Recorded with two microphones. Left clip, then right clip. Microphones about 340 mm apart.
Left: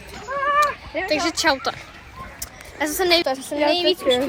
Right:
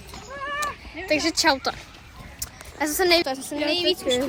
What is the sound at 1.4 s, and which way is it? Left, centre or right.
A woman's voice, centre.